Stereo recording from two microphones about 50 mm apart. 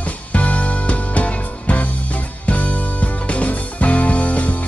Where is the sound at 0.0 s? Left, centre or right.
Left.